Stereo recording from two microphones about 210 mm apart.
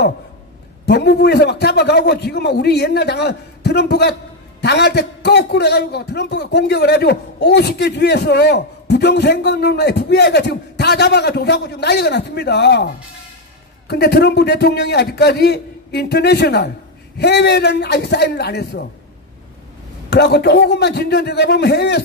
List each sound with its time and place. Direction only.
0.8 s a man's voice: 50° left (ahead or behind)
20.1 s a man's voice: 50° left (ahead or behind)